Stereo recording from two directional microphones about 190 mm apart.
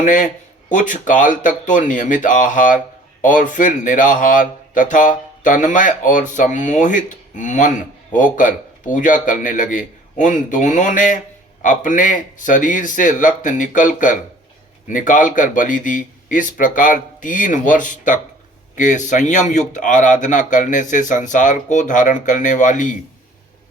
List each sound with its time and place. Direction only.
0.0 s speech: 45° left (ahead or behind)